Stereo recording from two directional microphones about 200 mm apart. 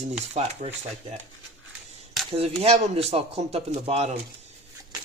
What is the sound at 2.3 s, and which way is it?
Speech, 30° right (ahead or behind).